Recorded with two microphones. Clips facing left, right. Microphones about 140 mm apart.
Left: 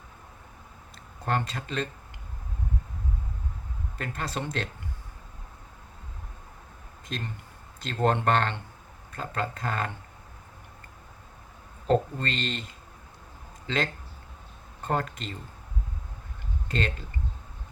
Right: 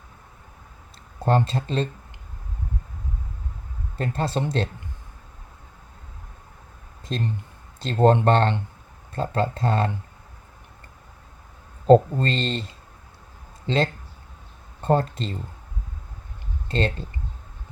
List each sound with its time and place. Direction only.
1.2 s speech: 30° right (ahead or behind)
3.9 s speech: 30° right (ahead or behind)
7.1 s speech: 30° right (ahead or behind)
11.9 s speech: 30° right (ahead or behind)
13.7 s speech: 30° right (ahead or behind)
16.6 s speech: 30° right (ahead or behind)